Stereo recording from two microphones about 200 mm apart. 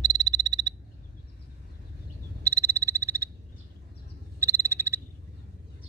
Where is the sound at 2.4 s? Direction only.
15° right (ahead or behind).